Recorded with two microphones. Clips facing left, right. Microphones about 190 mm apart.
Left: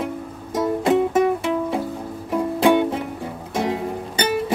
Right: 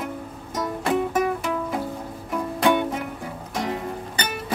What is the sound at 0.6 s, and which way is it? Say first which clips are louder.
Music: left 6 dB; 25° left (ahead or behind).